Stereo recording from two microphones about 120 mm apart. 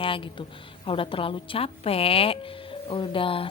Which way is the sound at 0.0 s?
45° left (ahead or behind).